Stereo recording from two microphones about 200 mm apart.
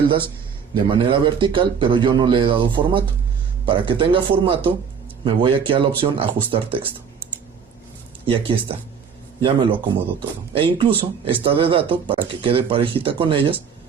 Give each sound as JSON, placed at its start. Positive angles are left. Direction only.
{"t": 0.7, "sound": "speech", "side_deg": -25}
{"t": 8.3, "sound": "speech", "side_deg": -25}